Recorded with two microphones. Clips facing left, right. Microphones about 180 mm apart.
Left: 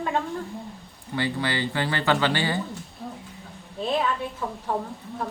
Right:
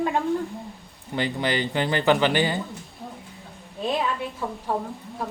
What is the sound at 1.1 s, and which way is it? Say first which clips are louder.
Speech: right 2 dB; 20° right (ahead or behind).